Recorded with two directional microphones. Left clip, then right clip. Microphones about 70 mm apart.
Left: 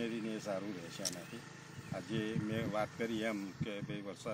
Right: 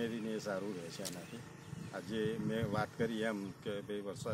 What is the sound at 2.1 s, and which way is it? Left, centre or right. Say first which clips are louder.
Speech: right 2 dB; right.